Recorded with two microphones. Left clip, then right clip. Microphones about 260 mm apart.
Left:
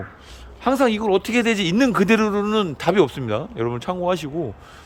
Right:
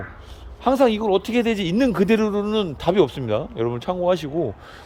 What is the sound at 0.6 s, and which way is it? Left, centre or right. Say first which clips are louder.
Speech: right 1 dB; centre.